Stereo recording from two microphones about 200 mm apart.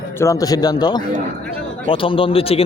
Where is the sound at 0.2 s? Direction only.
15° left (ahead or behind).